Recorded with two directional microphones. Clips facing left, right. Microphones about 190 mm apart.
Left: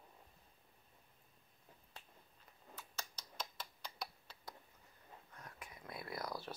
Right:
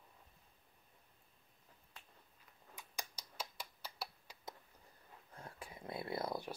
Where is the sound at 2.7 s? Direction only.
15° right (ahead or behind).